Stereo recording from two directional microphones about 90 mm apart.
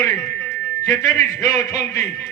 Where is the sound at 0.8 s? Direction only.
40° left (ahead or behind).